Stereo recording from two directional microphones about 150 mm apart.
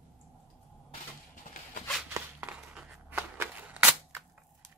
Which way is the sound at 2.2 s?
15° right (ahead or behind).